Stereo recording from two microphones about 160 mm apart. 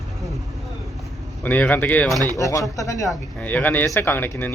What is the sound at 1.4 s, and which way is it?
Speech, 10° left (ahead or behind).